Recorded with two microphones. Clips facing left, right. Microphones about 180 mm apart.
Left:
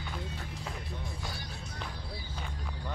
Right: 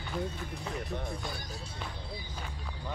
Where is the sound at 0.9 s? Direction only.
60° right (ahead or behind).